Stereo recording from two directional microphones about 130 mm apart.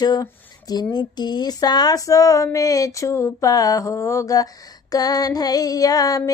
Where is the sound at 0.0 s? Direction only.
30° left (ahead or behind).